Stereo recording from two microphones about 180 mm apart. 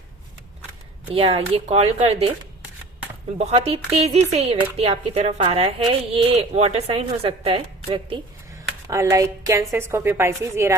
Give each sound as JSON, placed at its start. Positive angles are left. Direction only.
{"t": 1.1, "sound": "speech", "side_deg": -30}
{"t": 3.3, "sound": "speech", "side_deg": -35}
{"t": 8.9, "sound": "a woman's voice", "side_deg": -15}